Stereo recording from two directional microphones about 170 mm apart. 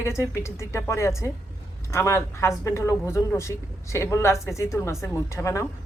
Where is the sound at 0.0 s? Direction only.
15° left (ahead or behind).